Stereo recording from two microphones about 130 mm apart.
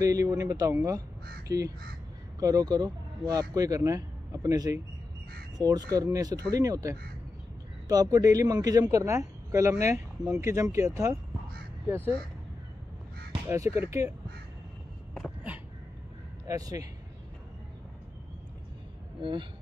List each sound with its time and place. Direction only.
0.0 s speech: 25° right (ahead or behind)
13.5 s speech: 20° right (ahead or behind)
16.4 s speech: 25° right (ahead or behind)